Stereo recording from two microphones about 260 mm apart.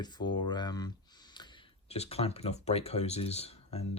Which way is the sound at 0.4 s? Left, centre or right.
Centre.